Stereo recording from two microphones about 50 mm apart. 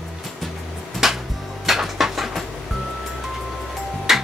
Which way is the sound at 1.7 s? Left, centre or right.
Centre.